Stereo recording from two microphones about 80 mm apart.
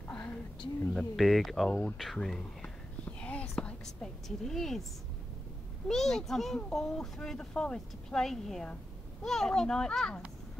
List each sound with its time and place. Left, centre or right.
0.9 s a child's voice: centre
1.7 s speech: left
2.0 s speech: centre
3.1 s a sound: centre
5.9 s a child's voice: centre